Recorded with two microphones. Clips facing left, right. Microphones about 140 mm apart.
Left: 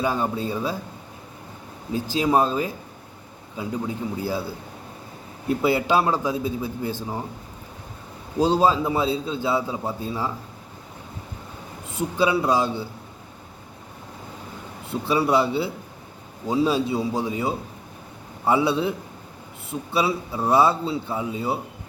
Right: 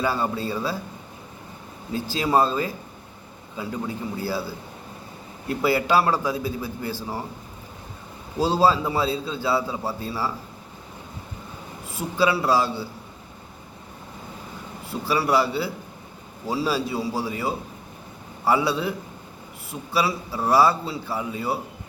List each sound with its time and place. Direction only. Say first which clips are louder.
0.0 s a man's voice: left 1 dB; 15° left (ahead or behind)
1.9 s a man's voice: left 1 dB; 15° left (ahead or behind)
5.6 s a man's voice: right 1 dB; 20° left (ahead or behind)
8.4 s a man's voice: left 1 dB; 20° left (ahead or behind)
11.9 s a man's voice: left 1 dB; 20° left (ahead or behind)
14.8 s a man's voice: left 2 dB; 20° left (ahead or behind)